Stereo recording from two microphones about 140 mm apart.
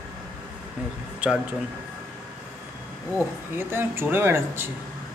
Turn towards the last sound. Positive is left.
turn(degrees=-15)  # may be behind; listen again after turning